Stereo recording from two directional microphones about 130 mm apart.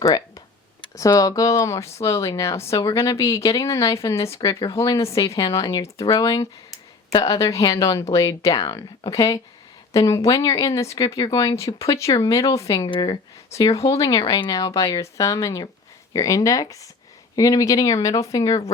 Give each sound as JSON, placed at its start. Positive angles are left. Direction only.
{"t": 0.0, "sound": "speech", "side_deg": 30}
{"t": 13.5, "sound": "speech", "side_deg": 25}